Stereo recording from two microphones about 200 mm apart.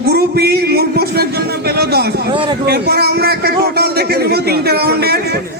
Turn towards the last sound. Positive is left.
turn(degrees=-50)  # may be behind; listen again after turning